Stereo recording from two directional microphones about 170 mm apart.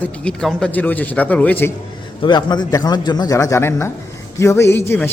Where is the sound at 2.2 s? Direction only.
25° left (ahead or behind).